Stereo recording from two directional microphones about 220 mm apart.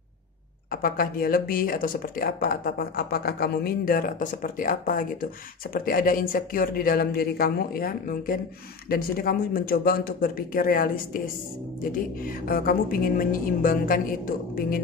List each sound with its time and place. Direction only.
0.7 s speech: 40° left (ahead or behind)
12.4 s speech: 40° left (ahead or behind)